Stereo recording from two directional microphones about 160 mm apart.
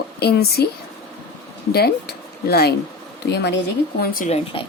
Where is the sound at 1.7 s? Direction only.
80° left.